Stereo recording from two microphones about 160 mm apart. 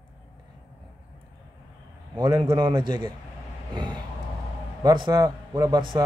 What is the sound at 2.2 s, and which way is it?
Speech, 25° right (ahead or behind).